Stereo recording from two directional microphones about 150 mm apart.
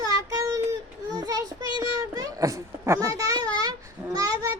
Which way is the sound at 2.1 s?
25° right (ahead or behind).